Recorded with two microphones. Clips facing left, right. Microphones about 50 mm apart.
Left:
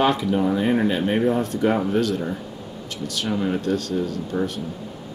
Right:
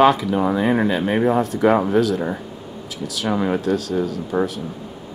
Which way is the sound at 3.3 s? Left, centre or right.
Centre.